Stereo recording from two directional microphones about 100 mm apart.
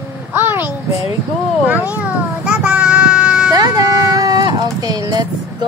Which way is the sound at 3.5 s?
40° right (ahead or behind).